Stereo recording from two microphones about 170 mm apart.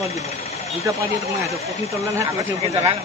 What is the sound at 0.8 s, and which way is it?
Speech, 20° right (ahead or behind).